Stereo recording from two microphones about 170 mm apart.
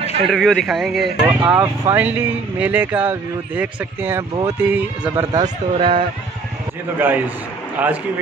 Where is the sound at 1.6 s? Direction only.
15° right (ahead or behind).